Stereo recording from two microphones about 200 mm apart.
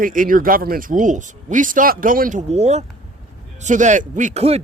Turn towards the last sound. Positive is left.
turn(degrees=-30)  # may be behind; listen again after turning